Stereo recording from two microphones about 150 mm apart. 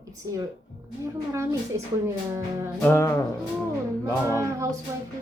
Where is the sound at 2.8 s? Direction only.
15° left (ahead or behind).